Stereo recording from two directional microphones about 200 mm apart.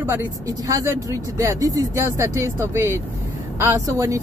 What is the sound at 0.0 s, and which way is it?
Speech, 15° right (ahead or behind).